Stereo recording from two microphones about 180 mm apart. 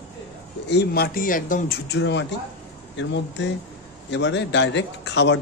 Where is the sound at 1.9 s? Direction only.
80° left.